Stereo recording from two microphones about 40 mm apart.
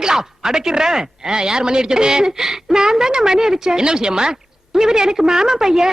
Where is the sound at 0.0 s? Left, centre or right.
Centre.